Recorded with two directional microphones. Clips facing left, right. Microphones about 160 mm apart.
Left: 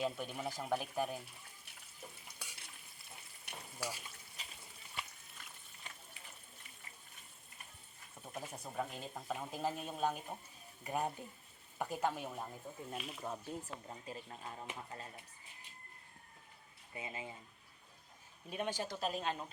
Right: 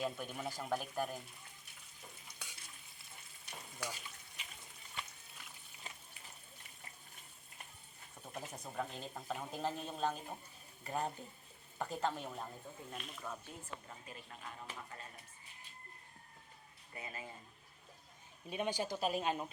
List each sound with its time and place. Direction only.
0.0 s speech: centre (ahead or behind)
3.5 s frying: 10° left (ahead or behind)
4.4 s frying: 35° left (ahead or behind)
8.2 s speech: 5° left (ahead or behind)
13.2 s speech: 25° left (ahead or behind)
16.9 s speech: 20° left (ahead or behind)
18.5 s speech: centre (ahead or behind)